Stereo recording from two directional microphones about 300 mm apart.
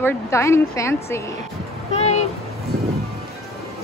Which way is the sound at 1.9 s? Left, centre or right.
Left.